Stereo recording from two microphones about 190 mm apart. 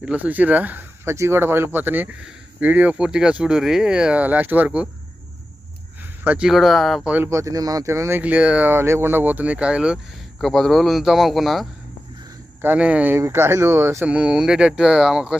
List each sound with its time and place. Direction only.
0.0 s speech: 5° right (ahead or behind)
6.2 s a man's voice: 5° right (ahead or behind)